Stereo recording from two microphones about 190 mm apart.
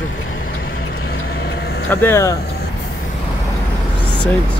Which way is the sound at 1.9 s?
10° left (ahead or behind).